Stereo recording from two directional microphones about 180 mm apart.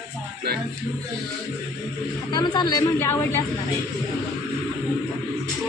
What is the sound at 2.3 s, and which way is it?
Speech, 25° left (ahead or behind).